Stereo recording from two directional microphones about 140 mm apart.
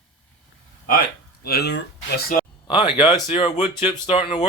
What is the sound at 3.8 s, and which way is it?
Speech, 40° left (ahead or behind).